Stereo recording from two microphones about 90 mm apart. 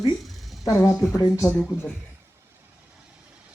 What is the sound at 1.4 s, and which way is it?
Speech, 15° left (ahead or behind).